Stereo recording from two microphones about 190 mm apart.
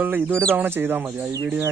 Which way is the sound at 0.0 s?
10° right (ahead or behind).